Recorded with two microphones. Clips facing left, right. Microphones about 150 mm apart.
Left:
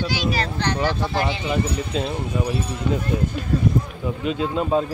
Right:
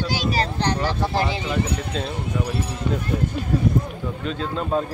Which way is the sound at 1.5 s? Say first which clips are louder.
Left 1 dB; 5° left (ahead or behind).